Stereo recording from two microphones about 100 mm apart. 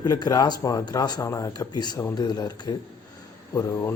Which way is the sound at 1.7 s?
45° left (ahead or behind).